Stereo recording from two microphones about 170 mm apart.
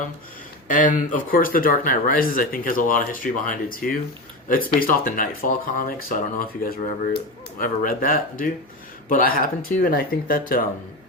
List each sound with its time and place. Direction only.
0.7 s speech: 50° left (ahead or behind)